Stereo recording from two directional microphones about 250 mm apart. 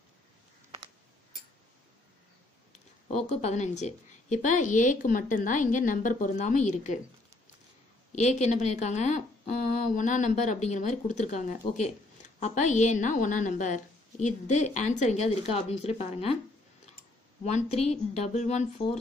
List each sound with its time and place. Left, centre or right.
3.1 s a woman's voice: left
8.1 s speech: left
17.6 s speech: left